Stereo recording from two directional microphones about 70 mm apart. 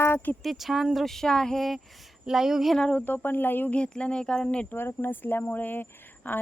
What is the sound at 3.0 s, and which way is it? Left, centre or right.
Speech, left.